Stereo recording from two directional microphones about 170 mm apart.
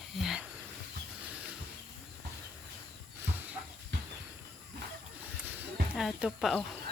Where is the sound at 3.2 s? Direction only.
10° right (ahead or behind).